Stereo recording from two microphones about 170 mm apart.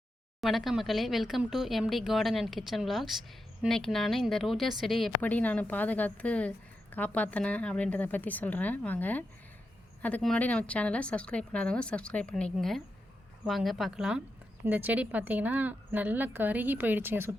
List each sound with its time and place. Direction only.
0.4 s a woman's voice: centre (ahead or behind)